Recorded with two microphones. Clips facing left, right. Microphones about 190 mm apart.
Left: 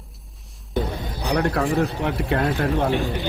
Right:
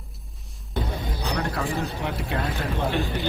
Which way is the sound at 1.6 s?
35° left (ahead or behind).